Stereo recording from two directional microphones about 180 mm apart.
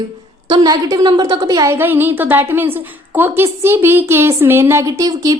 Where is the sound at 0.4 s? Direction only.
20° right (ahead or behind).